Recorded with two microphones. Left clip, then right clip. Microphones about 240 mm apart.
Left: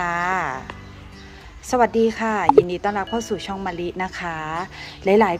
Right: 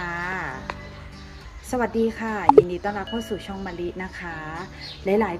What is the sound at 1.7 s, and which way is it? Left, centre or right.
Speech, left.